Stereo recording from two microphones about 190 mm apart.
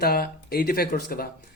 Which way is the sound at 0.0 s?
55° left (ahead or behind).